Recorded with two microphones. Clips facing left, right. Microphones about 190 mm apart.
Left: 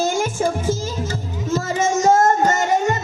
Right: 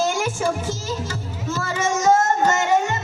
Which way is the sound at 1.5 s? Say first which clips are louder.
Left 4 dB; 40° left (ahead or behind).